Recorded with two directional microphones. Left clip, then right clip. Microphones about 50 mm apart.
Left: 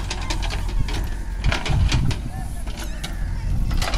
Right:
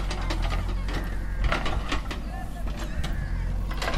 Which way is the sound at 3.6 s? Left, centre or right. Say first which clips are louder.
Left 3 dB; centre.